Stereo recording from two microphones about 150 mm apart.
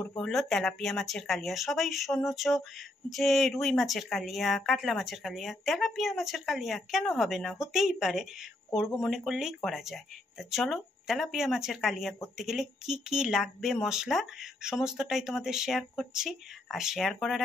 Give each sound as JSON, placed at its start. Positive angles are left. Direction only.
{"t": 0.2, "sound": "speech", "side_deg": 5}